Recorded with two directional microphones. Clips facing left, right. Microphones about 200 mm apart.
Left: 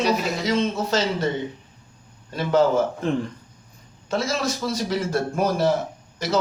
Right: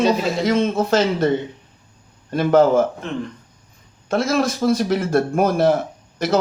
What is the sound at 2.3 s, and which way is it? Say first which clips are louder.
Speech: right 5 dB; 55° right (ahead or behind).